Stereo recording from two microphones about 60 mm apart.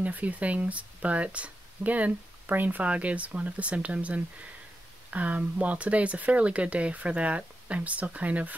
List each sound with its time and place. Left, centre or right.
0.0 s speech: right